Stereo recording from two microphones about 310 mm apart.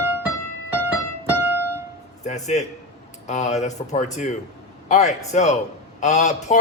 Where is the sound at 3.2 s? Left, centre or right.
Left.